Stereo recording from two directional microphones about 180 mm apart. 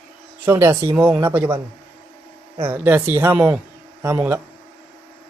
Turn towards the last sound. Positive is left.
turn(degrees=-10)  # may be behind; listen again after turning